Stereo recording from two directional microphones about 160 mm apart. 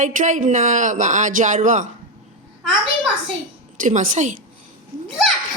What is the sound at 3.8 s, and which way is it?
Speech, 55° right (ahead or behind).